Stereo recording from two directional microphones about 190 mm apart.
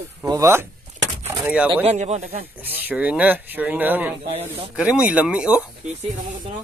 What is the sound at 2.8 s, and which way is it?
Speech, 5° right (ahead or behind).